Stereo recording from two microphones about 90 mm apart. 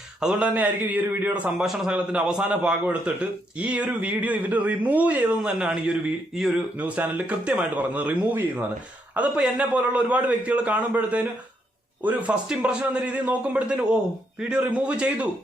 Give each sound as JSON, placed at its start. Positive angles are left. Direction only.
{"t": 0.2, "sound": "a man's voice", "side_deg": -10}
{"t": 6.7, "sound": "a man's voice", "side_deg": -15}